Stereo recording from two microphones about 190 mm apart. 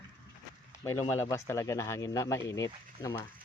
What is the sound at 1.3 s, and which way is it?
Speech, 15° left (ahead or behind).